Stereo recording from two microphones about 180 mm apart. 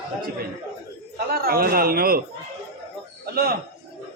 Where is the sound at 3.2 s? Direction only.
60° right (ahead or behind).